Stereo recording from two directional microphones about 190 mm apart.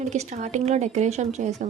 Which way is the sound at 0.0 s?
35° right (ahead or behind).